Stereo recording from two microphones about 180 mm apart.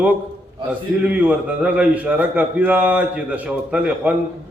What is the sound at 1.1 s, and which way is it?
A man's voice, 10° right (ahead or behind).